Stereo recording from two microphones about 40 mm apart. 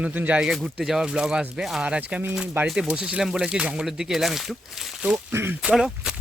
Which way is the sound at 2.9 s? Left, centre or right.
Right.